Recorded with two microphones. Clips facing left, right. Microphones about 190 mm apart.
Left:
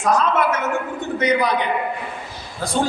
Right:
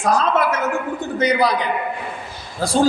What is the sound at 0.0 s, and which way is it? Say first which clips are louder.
A man's voice: even; 35° right (ahead or behind).